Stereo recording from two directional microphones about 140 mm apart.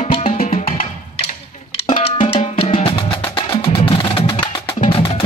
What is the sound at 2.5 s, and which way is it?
Wood block, 40° left (ahead or behind).